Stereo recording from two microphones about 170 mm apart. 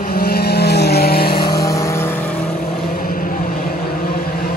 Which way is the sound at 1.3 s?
25° left (ahead or behind).